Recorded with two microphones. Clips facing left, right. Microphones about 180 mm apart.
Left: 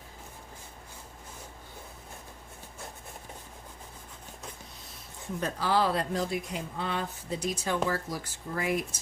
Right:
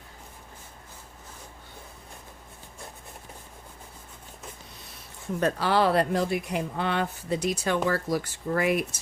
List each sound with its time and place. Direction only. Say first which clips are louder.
5.4 s speech: right 4 dB; 70° right (ahead or behind)